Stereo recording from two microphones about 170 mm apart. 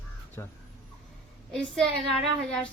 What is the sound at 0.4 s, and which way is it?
Speech, 20° left (ahead or behind).